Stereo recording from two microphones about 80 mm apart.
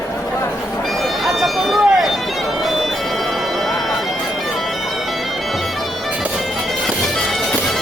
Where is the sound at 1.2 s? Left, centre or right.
Centre.